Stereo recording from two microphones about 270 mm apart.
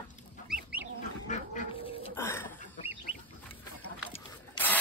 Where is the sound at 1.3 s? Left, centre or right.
Left.